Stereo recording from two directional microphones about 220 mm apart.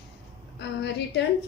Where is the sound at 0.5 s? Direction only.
50° left (ahead or behind).